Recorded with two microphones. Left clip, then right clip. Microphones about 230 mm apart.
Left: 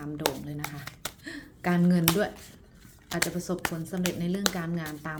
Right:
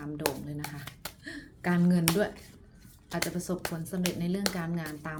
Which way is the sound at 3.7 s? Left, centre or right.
Centre.